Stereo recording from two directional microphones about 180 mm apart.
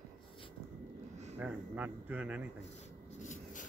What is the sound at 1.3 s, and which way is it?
Speech, 10° right (ahead or behind).